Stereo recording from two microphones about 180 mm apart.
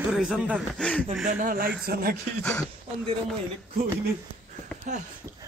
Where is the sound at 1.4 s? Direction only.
50° right (ahead or behind).